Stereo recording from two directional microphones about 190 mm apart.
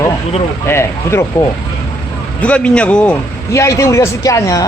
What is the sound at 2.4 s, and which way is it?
A man's voice, 5° left (ahead or behind).